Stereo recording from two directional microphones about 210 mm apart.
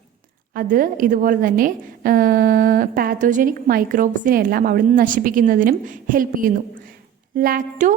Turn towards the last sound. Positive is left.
turn(degrees=-40)  # may be behind; listen again after turning